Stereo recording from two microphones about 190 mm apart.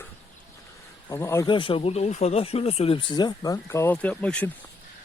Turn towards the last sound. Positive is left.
turn(degrees=5)  # may be behind; listen again after turning